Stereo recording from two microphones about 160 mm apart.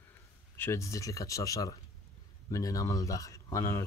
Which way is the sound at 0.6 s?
20° left (ahead or behind).